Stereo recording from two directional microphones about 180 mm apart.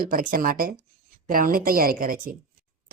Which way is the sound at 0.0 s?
50° right (ahead or behind).